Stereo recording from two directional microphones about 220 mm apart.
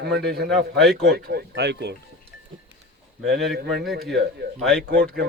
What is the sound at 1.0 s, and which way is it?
Speech, 45° right (ahead or behind).